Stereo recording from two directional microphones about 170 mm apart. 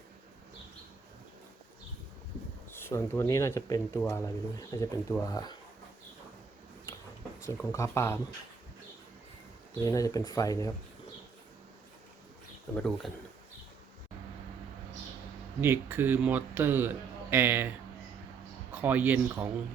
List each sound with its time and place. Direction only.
2.7 s speech: 15° left (ahead or behind)
7.4 s speech: 15° left (ahead or behind)
9.8 s speech: 20° left (ahead or behind)
12.7 s speech: 5° left (ahead or behind)
15.6 s a man's voice: 15° right (ahead or behind)
18.7 s a man's voice: 10° right (ahead or behind)